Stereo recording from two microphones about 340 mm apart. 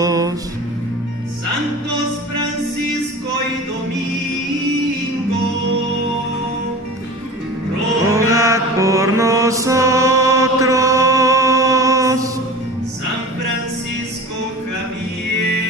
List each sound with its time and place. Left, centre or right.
0.0 s music: centre
8.1 s mantra: centre